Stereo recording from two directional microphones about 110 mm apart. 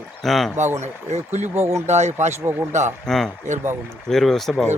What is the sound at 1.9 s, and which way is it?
Speech, 90° right.